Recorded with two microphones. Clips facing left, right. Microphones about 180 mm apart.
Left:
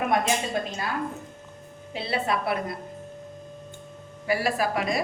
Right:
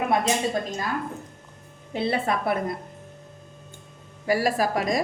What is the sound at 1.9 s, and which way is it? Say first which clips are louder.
Speech: right 3 dB; 50° right (ahead or behind).